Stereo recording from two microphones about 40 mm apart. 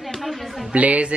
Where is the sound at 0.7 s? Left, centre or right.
Right.